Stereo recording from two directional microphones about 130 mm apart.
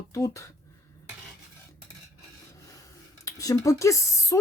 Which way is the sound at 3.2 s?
25° left (ahead or behind).